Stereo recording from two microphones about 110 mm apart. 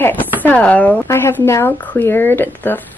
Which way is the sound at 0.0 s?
15° left (ahead or behind).